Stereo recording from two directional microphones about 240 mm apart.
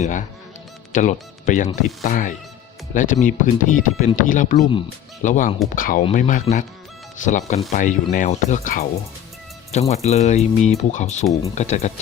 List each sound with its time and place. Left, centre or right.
0.0 s speech: left
9.9 s speech: left